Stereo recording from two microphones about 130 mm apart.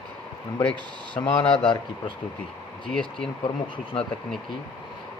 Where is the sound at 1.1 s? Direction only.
40° left (ahead or behind).